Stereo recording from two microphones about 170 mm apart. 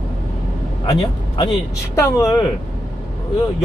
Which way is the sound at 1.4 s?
25° left (ahead or behind).